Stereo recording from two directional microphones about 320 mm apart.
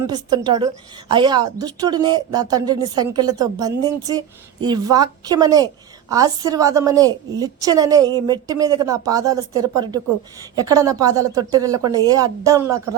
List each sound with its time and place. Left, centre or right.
0.1 s speech: centre
10.5 s speech: centre